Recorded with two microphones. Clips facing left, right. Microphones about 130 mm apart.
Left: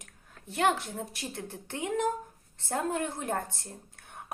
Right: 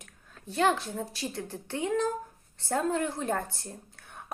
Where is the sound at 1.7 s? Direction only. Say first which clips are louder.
Right 1 dB; 20° left (ahead or behind).